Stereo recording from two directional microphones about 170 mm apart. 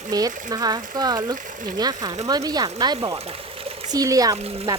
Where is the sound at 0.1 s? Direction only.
20° right (ahead or behind).